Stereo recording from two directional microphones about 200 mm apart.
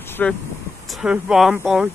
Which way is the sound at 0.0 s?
10° left (ahead or behind).